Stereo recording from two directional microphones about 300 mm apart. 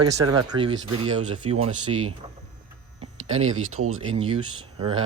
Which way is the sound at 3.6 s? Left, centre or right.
Right.